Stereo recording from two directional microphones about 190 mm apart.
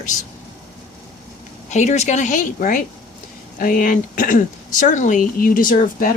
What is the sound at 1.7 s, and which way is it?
Speech, 35° left (ahead or behind).